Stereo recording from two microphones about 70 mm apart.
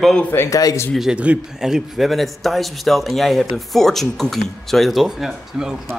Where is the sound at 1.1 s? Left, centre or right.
Centre.